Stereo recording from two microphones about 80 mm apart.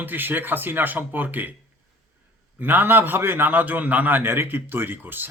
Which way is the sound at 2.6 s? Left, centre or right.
Right.